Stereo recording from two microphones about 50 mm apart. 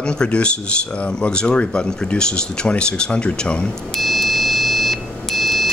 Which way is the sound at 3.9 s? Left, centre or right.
Centre.